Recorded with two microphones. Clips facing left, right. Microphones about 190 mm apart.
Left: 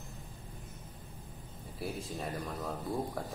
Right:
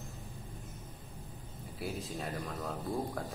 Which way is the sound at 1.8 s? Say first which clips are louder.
Even; centre (ahead or behind).